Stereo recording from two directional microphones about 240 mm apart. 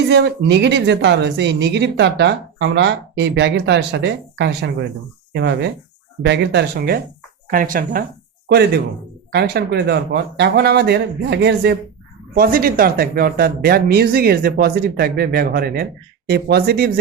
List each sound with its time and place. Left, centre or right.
0.1 s speech: right